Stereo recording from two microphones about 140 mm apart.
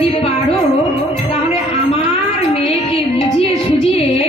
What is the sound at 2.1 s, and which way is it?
Music, 45° left (ahead or behind).